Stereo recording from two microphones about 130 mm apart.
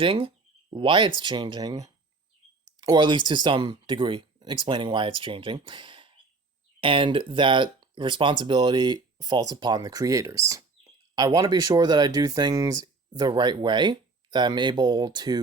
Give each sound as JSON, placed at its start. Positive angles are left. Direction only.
{"t": 0.0, "sound": "speech", "side_deg": -45}